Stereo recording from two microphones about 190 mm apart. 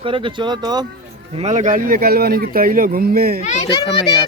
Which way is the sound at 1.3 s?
35° right (ahead or behind).